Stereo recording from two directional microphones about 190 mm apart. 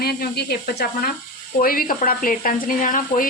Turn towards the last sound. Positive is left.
turn(degrees=45)  # may be behind; listen again after turning